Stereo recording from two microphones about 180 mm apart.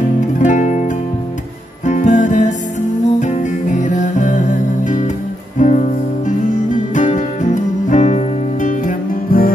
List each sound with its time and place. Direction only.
0.4 s music: 40° left (ahead or behind)